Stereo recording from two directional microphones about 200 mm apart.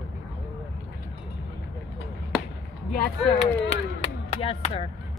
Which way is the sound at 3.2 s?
30° left (ahead or behind).